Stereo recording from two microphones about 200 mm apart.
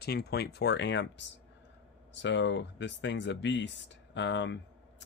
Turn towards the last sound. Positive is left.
turn(degrees=60)  # may be behind; listen again after turning